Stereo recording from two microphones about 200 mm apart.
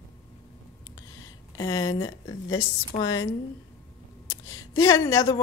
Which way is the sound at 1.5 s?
20° left (ahead or behind).